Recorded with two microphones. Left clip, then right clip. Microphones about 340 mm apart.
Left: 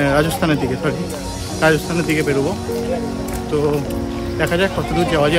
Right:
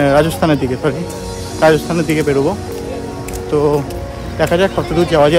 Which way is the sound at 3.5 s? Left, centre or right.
Centre.